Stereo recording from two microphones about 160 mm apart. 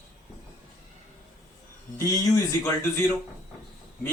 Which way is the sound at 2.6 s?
15° left (ahead or behind).